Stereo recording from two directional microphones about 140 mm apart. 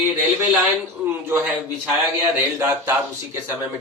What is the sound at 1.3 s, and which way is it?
Speech, 15° right (ahead or behind).